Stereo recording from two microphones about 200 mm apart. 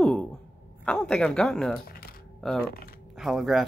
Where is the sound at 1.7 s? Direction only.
50° left (ahead or behind).